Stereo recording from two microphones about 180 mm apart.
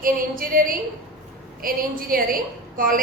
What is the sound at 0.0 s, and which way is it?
A woman's voice, 50° right (ahead or behind).